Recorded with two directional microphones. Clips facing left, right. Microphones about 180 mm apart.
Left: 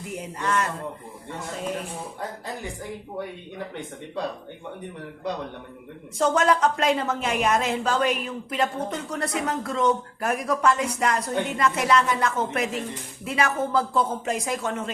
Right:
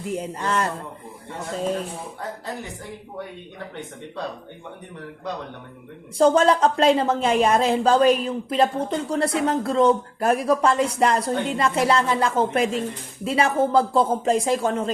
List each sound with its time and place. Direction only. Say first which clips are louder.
0.1 s speech: right 2 dB; 30° right (ahead or behind)
6.1 s a woman's voice: right 5 dB; 30° right (ahead or behind)